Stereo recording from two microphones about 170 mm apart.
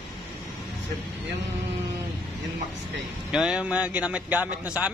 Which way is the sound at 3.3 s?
5° right (ahead or behind).